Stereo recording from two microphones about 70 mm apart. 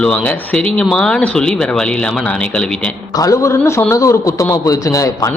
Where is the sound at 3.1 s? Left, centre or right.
Left.